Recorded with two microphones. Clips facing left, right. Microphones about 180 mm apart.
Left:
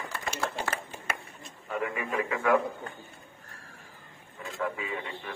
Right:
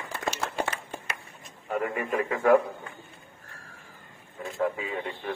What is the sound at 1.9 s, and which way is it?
Speech, 45° right (ahead or behind).